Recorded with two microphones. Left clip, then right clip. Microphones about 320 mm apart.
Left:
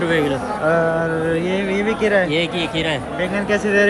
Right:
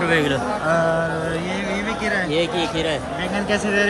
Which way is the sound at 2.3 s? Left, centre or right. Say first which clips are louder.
Left 1 dB; left.